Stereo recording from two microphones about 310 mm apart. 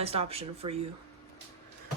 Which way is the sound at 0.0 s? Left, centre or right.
Centre.